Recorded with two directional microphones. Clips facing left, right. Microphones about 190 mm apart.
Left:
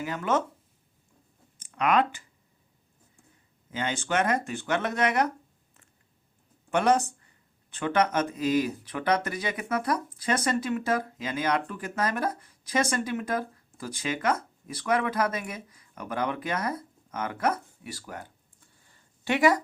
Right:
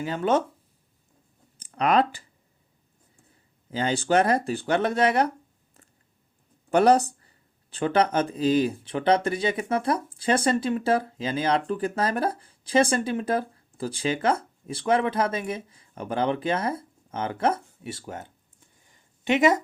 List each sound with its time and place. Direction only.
0.0 s speech: 30° right (ahead or behind)
1.5 s speech: 35° right (ahead or behind)
3.7 s speech: 35° right (ahead or behind)
6.7 s speech: 35° right (ahead or behind)
18.8 s a sound: 20° right (ahead or behind)